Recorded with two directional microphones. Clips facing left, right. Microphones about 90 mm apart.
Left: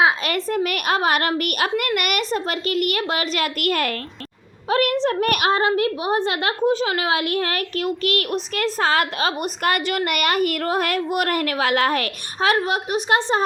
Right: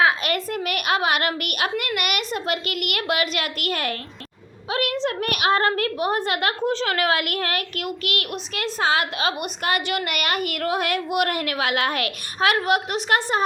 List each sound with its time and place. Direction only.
0.4 s a child's voice: 40° left (ahead or behind)
5.5 s a woman's voice: 20° left (ahead or behind)
6.6 s a child's voice: 15° left (ahead or behind)